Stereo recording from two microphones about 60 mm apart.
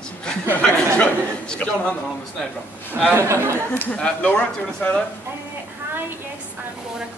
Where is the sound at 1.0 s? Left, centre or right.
Left.